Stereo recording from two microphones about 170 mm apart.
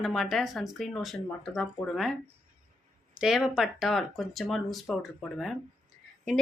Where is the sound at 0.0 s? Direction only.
Centre (ahead or behind).